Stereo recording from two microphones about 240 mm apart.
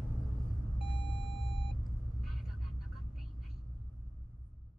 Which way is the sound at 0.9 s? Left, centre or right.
Left.